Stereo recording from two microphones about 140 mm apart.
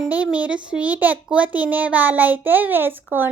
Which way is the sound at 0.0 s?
10° right (ahead or behind).